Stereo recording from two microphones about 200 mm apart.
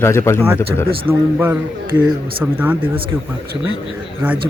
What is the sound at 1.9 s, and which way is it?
Speech, 20° right (ahead or behind).